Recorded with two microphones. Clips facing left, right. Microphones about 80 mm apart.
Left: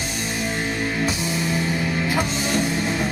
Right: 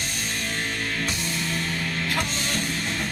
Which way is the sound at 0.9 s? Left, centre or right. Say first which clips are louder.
Left 5 dB; centre.